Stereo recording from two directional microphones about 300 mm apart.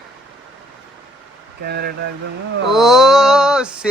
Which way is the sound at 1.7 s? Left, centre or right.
Right.